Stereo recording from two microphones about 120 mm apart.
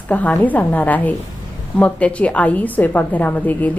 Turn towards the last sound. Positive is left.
turn(degrees=15)  # may be behind; listen again after turning